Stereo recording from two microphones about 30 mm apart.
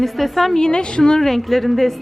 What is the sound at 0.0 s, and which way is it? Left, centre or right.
Speech, centre.